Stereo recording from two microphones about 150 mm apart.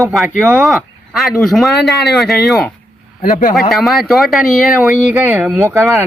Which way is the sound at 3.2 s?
65° left (ahead or behind).